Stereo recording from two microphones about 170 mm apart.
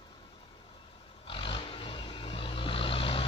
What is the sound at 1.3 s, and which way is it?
Vehicle, 30° left (ahead or behind).